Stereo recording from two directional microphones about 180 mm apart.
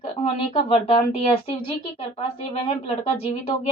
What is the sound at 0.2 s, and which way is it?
A woman's voice, 35° left (ahead or behind).